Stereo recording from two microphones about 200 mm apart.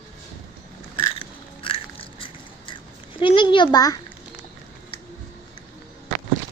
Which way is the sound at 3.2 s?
25° left (ahead or behind).